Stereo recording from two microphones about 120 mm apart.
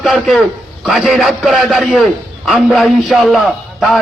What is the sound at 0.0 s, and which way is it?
A man's voice, centre (ahead or behind).